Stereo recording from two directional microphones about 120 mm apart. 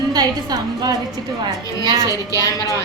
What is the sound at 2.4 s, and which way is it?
Speech, 30° left (ahead or behind).